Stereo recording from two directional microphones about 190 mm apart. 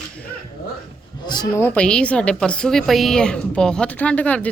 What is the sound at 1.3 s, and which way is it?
Speech, 20° left (ahead or behind).